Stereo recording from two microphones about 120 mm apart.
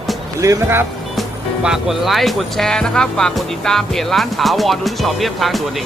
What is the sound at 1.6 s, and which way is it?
Speech, 5° right (ahead or behind).